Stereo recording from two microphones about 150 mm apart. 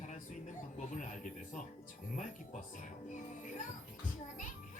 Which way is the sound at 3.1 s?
60° left (ahead or behind).